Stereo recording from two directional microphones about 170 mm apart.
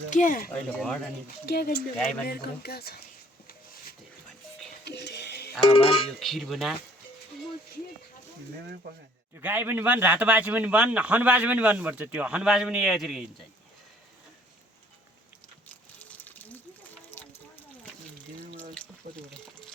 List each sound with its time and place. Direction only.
0.1 s speech: 50° left (ahead or behind)
0.5 s speech: 5° left (ahead or behind)
1.5 s speech: 65° left (ahead or behind)
2.0 s speech: 5° left (ahead or behind)
2.2 s speech: 65° left (ahead or behind)
4.9 s music: 80° left
5.6 s speech: 35° left (ahead or behind)
6.1 s speech: centre (ahead or behind)
9.4 s speech: 10° right (ahead or behind)
15.7 s a sound: 10° left (ahead or behind)
18.7 s water: 5° left (ahead or behind)